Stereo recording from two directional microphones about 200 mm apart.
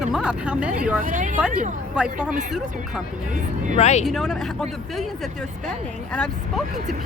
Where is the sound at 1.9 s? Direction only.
5° right (ahead or behind).